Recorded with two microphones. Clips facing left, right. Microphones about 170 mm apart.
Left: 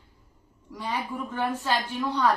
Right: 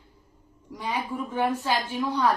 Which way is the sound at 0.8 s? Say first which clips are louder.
Right 1 dB; 15° right (ahead or behind).